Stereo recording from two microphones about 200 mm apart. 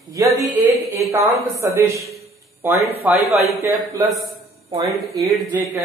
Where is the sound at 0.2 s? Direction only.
15° right (ahead or behind).